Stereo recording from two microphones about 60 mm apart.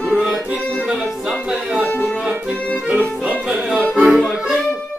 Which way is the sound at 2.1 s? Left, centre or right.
Centre.